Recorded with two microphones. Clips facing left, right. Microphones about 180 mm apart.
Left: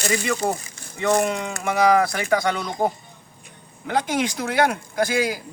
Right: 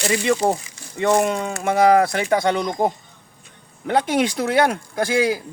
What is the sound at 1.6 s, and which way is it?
Speech, 25° right (ahead or behind).